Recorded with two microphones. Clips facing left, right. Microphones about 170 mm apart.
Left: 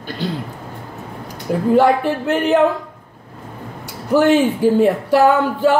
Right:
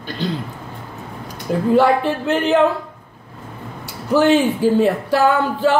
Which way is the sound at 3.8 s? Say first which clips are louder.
Left 1 dB; 10° left (ahead or behind).